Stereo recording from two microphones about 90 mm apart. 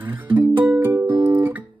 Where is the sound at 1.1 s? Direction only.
55° right (ahead or behind).